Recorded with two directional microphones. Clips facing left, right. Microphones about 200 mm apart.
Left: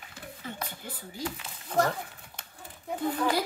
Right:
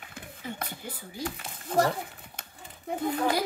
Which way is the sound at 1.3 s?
35° right (ahead or behind).